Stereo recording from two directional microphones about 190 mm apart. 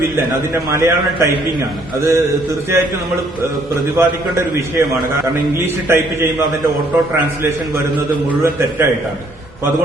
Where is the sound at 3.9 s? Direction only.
15° right (ahead or behind).